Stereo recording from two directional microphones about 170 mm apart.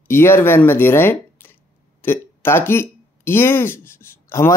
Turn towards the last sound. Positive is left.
turn(degrees=15)  # may be behind; listen again after turning